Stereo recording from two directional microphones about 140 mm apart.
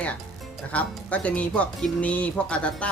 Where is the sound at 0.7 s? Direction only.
10° left (ahead or behind).